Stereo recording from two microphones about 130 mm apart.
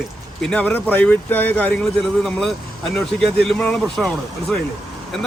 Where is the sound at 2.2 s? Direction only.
5° left (ahead or behind).